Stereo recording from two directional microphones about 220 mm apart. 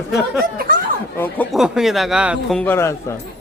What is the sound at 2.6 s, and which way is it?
Speech, 10° left (ahead or behind).